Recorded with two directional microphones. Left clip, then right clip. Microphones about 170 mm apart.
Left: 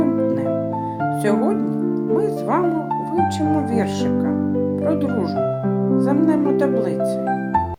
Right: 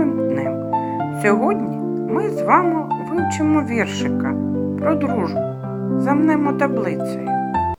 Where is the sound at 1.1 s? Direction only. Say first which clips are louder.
Right 4 dB; 20° right (ahead or behind).